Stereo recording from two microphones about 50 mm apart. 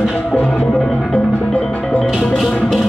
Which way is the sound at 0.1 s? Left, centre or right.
Centre.